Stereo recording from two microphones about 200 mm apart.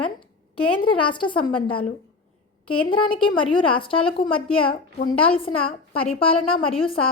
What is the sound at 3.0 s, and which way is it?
A woman's voice, 25° left (ahead or behind).